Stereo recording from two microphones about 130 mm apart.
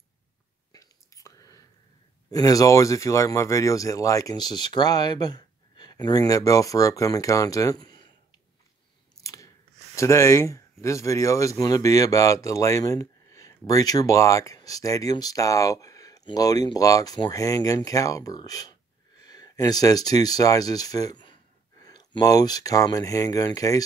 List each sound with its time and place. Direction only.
0.7 s whispering: 25° left (ahead or behind)
2.3 s speech: 25° left (ahead or behind)
9.2 s chewing: 25° left (ahead or behind)
9.9 s speech: 20° left (ahead or behind)